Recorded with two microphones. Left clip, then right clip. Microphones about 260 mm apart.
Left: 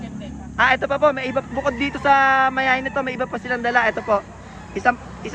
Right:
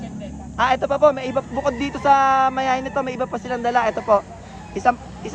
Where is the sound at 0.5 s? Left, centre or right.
Centre.